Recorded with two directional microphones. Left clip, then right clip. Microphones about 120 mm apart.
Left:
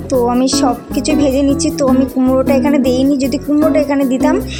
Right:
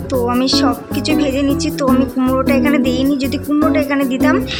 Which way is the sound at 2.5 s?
55° left (ahead or behind).